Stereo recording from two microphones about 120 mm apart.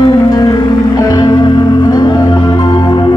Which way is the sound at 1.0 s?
35° left (ahead or behind).